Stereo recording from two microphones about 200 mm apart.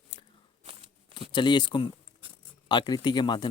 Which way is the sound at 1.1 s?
25° left (ahead or behind).